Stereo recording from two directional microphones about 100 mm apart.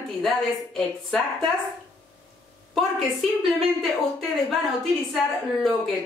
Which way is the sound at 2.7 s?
Centre (ahead or behind).